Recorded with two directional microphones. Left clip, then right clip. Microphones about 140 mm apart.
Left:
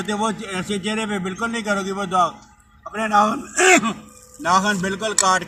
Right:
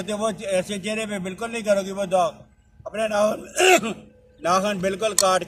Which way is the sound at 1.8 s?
25° right (ahead or behind).